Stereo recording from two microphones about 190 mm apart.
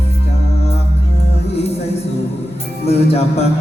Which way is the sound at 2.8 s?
35° left (ahead or behind).